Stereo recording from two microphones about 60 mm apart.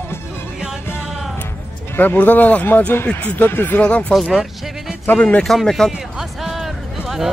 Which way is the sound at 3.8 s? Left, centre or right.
Centre.